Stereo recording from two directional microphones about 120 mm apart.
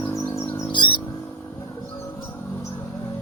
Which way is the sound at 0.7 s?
40° left (ahead or behind).